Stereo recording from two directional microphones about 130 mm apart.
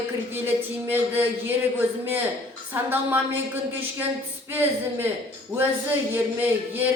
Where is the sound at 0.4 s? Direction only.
15° right (ahead or behind).